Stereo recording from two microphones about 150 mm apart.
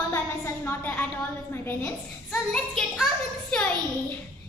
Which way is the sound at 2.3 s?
Centre (ahead or behind).